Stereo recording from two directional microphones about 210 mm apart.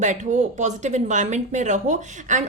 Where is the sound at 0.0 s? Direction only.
35° right (ahead or behind).